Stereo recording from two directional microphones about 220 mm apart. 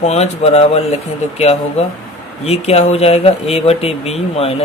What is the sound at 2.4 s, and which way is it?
Speech, 30° left (ahead or behind).